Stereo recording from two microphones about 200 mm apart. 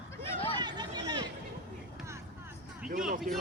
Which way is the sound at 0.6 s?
20° right (ahead or behind).